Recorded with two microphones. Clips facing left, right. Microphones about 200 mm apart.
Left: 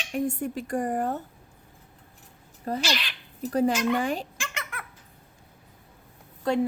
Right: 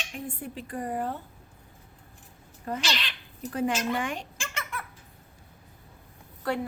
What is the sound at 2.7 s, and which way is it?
A woman's voice, 35° left (ahead or behind).